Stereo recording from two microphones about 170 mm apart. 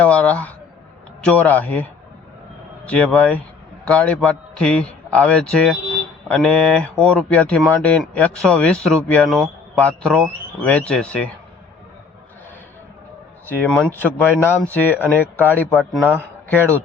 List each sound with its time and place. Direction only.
0.0 s a man's voice: 10° left (ahead or behind)
13.6 s speech: 5° left (ahead or behind)